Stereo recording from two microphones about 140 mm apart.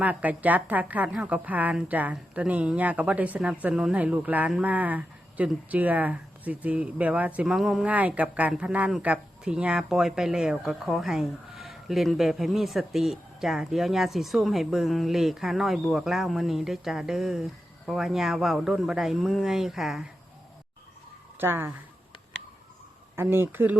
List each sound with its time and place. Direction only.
0.0 s a woman's voice: 10° right (ahead or behind)
21.3 s speech: 15° right (ahead or behind)
23.1 s speech: 15° right (ahead or behind)